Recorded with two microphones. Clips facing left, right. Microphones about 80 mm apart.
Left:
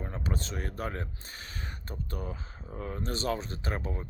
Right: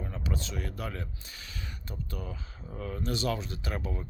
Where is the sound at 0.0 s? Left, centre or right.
Left.